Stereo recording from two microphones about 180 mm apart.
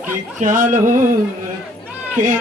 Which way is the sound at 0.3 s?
45° right (ahead or behind).